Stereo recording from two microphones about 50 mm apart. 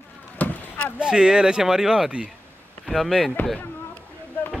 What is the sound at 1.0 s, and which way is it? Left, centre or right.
Speech, centre.